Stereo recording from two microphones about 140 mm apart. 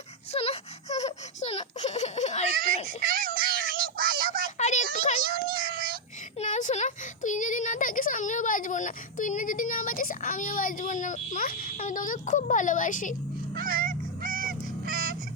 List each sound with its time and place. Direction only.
0.3 s baby laughter: 45° left (ahead or behind)
3.1 s cat: 90° right
4.5 s a sound: 55° left (ahead or behind)
5.5 s child singing: 90° right
6.4 s a sound: 60° left (ahead or behind)
13.7 s honk: 85° right
14.8 s fowl: 90° right